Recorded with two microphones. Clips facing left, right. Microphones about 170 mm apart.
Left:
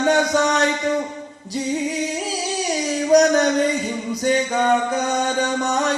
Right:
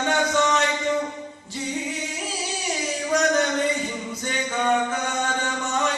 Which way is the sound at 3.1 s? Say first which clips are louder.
Left 7 dB; 35° left (ahead or behind).